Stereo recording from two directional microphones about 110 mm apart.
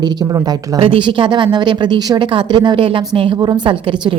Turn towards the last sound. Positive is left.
turn(degrees=-50)  # may be behind; listen again after turning